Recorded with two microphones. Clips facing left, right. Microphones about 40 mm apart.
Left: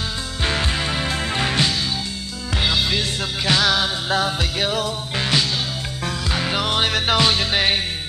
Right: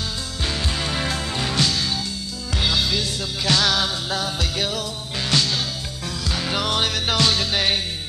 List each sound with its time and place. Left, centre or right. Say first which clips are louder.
0.4 s music: left 4 dB; left
0.7 s music: left 2 dB; centre
1.2 s music: left 5 dB; left
2.6 s music: left 1 dB; centre
6.3 s music: left 1 dB; centre